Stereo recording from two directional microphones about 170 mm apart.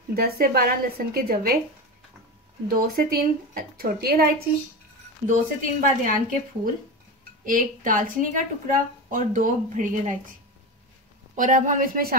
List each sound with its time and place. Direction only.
0.1 s a woman's voice: 60° right (ahead or behind)
2.7 s a woman's voice: 60° right (ahead or behind)
5.2 s a woman's voice: 50° right (ahead or behind)
11.3 s a woman's voice: 50° right (ahead or behind)